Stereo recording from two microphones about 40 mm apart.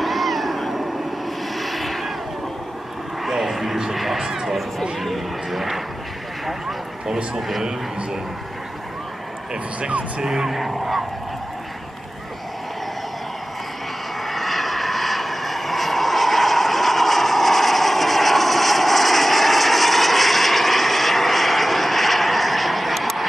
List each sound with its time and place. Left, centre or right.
0.0 s cat: centre
1.6 s vehicle: centre
3.3 s a sound: centre
7.3 s a man's voice: centre
9.8 s speech: right
10.2 s speech: centre
14.2 s vehicle: centre